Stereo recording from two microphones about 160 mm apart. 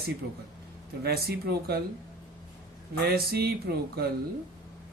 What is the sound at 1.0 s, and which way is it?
Speech, 75° right (ahead or behind).